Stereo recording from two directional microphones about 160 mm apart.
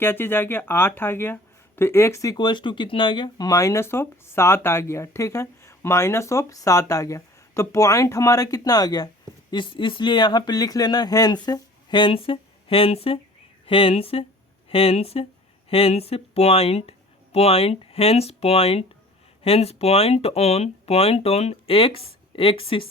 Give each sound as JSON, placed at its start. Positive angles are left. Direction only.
{"t": 0.0, "sound": "speech", "side_deg": 15}